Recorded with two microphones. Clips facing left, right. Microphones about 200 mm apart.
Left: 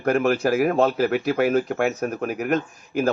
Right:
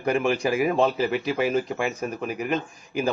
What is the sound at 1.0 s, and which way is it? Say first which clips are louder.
Speech: left 3 dB; 55° left (ahead or behind).